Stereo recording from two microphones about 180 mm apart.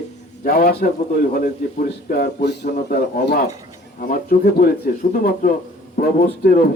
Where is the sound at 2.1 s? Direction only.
65° left (ahead or behind).